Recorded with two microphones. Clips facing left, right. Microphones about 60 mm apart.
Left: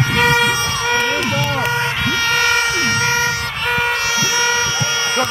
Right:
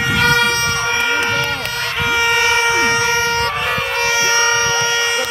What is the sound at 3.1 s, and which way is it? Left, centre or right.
Vehicle, right.